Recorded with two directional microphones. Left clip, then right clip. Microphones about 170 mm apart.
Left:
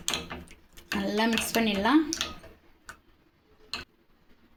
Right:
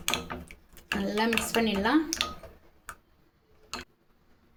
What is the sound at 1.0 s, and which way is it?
Speech, 30° left (ahead or behind).